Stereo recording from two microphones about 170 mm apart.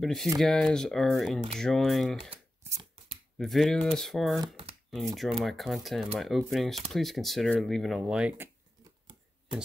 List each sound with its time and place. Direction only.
0.0 s speech: centre (ahead or behind)
2.7 s shuffling cards: 25° right (ahead or behind)
3.3 s speech: centre (ahead or behind)